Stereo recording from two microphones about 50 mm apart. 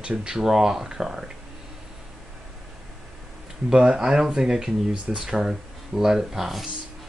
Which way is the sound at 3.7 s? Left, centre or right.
Centre.